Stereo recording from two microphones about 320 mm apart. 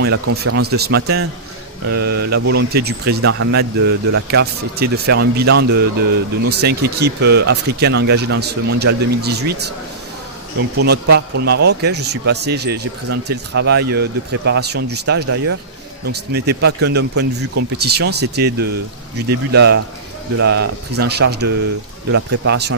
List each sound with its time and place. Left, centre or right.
0.0 s speech: right
1.9 s mantra: right
2.4 s speech: right
11.1 s speech: right